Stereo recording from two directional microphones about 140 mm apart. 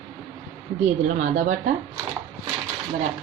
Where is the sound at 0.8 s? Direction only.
55° right (ahead or behind).